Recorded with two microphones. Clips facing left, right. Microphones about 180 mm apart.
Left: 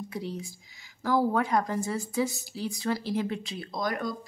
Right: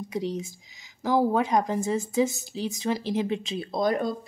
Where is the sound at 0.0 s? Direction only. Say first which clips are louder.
Right 5 dB; 20° right (ahead or behind).